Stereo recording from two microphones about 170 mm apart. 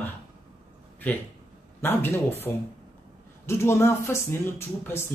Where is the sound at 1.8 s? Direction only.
15° left (ahead or behind).